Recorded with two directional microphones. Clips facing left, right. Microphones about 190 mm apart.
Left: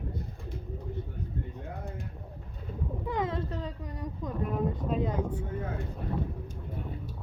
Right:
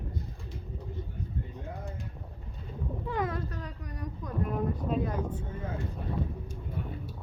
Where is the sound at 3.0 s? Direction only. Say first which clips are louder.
Left 1 dB; 20° left (ahead or behind).